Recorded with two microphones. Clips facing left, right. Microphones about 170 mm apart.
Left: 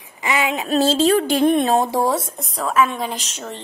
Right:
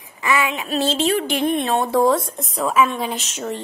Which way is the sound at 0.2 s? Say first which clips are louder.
Even; 20° left (ahead or behind).